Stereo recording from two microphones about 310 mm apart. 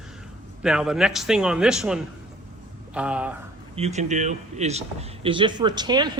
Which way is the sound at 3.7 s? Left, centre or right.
Right.